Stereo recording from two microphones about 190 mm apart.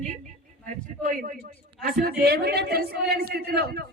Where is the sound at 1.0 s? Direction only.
40° right (ahead or behind).